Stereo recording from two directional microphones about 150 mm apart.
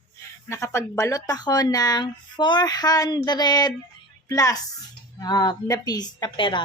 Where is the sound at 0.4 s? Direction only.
20° left (ahead or behind).